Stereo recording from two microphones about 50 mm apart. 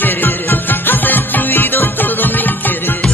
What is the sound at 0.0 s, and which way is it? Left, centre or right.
Music, left.